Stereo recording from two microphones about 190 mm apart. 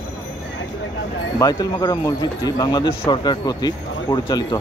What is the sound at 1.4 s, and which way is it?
Speech, 20° left (ahead or behind).